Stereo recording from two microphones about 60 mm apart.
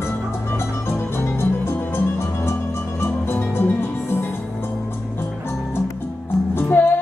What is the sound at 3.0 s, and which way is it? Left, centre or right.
Music, left.